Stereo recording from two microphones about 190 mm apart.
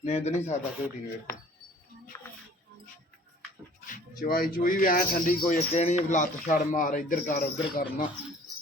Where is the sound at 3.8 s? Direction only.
45° left (ahead or behind).